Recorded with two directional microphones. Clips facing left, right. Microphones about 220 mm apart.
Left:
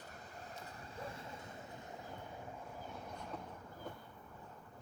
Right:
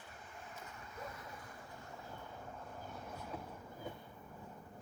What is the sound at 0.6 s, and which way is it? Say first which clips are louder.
Vehicle: left 1 dB; 35° left (ahead or behind).